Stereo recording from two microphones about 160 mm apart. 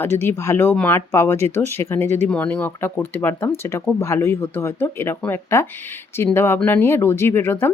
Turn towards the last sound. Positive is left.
turn(degrees=15)  # may be behind; listen again after turning